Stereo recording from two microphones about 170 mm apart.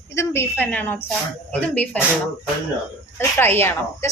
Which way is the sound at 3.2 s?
15° left (ahead or behind).